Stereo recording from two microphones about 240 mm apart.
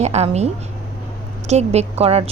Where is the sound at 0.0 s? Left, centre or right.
Right.